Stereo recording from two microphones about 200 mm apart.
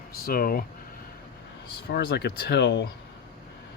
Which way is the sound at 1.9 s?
55° left (ahead or behind).